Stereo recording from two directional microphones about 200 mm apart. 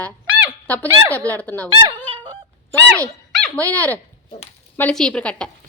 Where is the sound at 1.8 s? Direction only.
25° right (ahead or behind).